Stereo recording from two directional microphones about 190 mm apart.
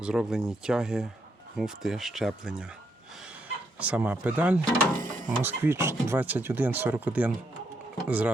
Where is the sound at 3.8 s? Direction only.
5° right (ahead or behind).